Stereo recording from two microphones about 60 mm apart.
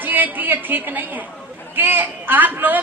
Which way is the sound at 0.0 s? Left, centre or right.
Right.